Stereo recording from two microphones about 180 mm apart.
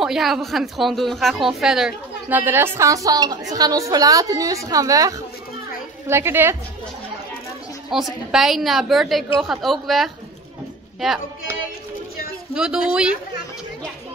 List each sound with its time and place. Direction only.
0.0 s a woman's voice: centre (ahead or behind)
7.9 s a woman's voice: centre (ahead or behind)
12.5 s a woman's voice: 5° right (ahead or behind)